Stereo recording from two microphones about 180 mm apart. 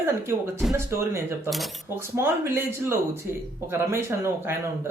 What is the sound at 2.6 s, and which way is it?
Speech, 15° right (ahead or behind).